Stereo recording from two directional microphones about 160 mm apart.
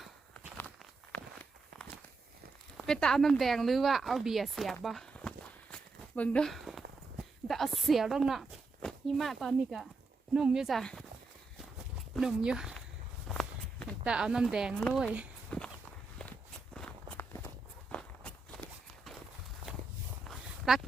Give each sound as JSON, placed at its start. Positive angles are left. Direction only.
{"t": 0.0, "sound": "walk", "side_deg": 5}
{"t": 2.7, "sound": "a woman's voice", "side_deg": 5}
{"t": 12.1, "sound": "speech", "side_deg": -5}
{"t": 13.2, "sound": "walk", "side_deg": 0}
{"t": 14.0, "sound": "speech", "side_deg": -5}
{"t": 15.4, "sound": "walk", "side_deg": 5}
{"t": 17.9, "sound": "walk", "side_deg": 5}
{"t": 19.6, "sound": "walk", "side_deg": -35}
{"t": 20.2, "sound": "a sound", "side_deg": 0}